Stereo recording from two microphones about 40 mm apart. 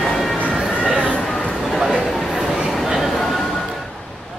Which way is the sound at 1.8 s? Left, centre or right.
Centre.